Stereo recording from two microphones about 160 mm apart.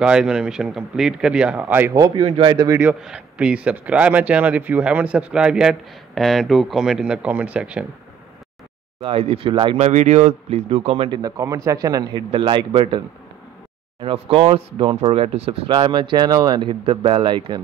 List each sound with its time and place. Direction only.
0.0 s speech: 5° right (ahead or behind); by 2.5 s 35° right (ahead or behind)
2.5 s a man's voice: 20° right (ahead or behind)
2.8 s a man's voice: 5° right (ahead or behind)
9.0 s speech: 35° right (ahead or behind)
9.8 s speech: 45° right (ahead or behind)
14.0 s speech: 35° right (ahead or behind)